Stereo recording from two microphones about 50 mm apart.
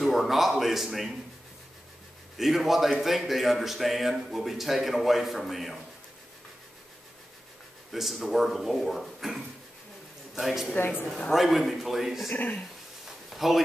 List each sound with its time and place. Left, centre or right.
0.0 s speech: centre
2.3 s a man's voice: centre
7.9 s a man's voice: centre
10.8 s speech: left
11.3 s a man's voice: centre
12.3 s speech: left
13.3 s a sound: centre